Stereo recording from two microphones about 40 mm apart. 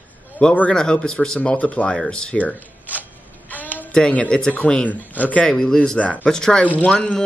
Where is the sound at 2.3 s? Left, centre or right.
Left.